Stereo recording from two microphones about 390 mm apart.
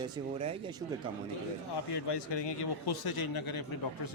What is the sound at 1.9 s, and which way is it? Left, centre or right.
A man's voice, left.